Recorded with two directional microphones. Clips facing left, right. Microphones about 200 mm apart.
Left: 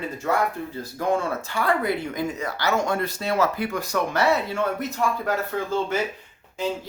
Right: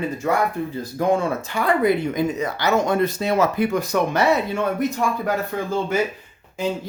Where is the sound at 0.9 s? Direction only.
15° right (ahead or behind).